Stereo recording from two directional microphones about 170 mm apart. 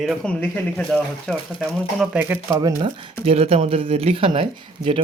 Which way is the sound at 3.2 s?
35° right (ahead or behind).